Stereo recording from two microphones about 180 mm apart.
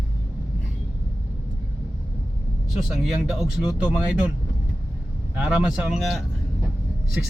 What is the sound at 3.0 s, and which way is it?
Speech, centre (ahead or behind).